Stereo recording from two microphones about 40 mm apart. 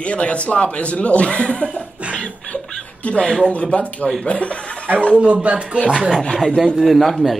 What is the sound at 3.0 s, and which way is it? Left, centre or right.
A man's voice, left.